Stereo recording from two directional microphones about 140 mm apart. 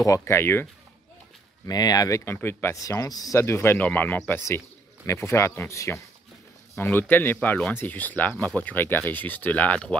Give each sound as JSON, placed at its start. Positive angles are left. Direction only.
{"t": 0.0, "sound": "speech", "side_deg": 20}
{"t": 1.7, "sound": "speech", "side_deg": 25}